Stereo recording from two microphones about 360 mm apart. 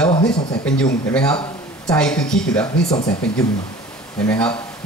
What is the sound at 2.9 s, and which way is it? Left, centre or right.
Speech, centre.